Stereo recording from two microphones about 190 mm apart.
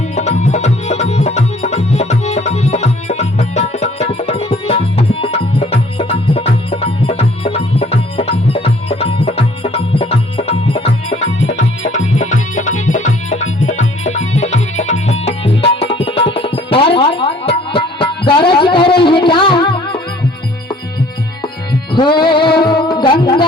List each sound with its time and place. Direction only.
0.2 s music: 35° left (ahead or behind)
11.1 s music: 85° left
12.1 s music: 40° left (ahead or behind); by 20.0 s 25° left (ahead or behind)
21.4 s music: 25° left (ahead or behind)